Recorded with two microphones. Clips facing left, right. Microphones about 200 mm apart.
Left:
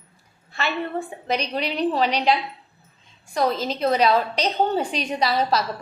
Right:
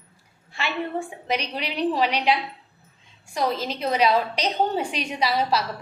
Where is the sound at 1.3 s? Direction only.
10° right (ahead or behind).